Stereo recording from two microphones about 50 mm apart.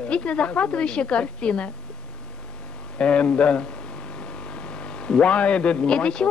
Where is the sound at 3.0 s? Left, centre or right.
Left.